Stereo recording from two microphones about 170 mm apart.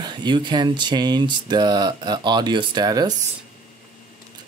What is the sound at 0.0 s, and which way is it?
Speech, 25° right (ahead or behind).